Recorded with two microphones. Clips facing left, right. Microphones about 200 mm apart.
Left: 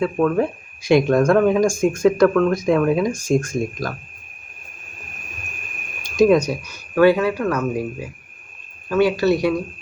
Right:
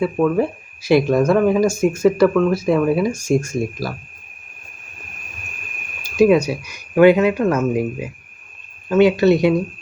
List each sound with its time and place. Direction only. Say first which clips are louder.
0.0 s speech: right 1 dB; 5° right (ahead or behind)
6.0 s speech: right 1 dB; 5° right (ahead or behind)